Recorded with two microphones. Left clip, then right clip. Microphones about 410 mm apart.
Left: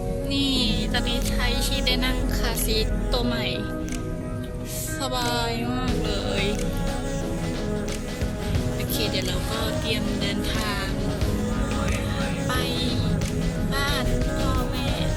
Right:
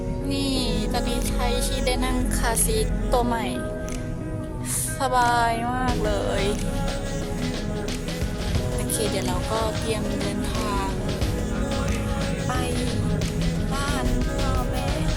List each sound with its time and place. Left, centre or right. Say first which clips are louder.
0.3 s music: left 2 dB; centre
5.0 s music: right 6 dB; centre
12.5 s music: left 2 dB; centre